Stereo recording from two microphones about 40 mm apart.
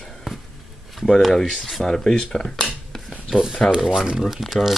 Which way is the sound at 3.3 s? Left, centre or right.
Centre.